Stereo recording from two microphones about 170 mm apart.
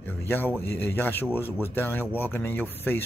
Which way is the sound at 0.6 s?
10° left (ahead or behind).